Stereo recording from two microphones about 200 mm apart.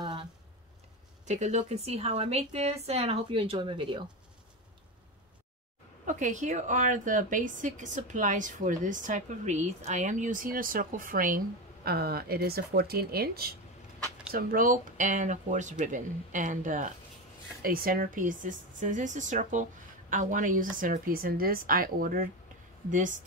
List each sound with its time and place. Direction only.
0.0 s a sound: 25° right (ahead or behind)
1.2 s a woman's voice: 35° right (ahead or behind)
6.0 s a woman's voice: 40° right (ahead or behind)